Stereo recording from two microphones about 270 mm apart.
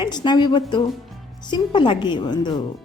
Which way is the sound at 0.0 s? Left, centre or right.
Centre.